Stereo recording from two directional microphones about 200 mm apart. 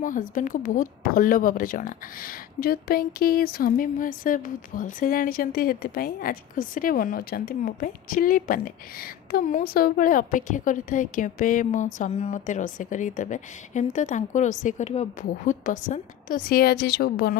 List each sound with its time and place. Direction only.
0.0 s speech: 40° left (ahead or behind)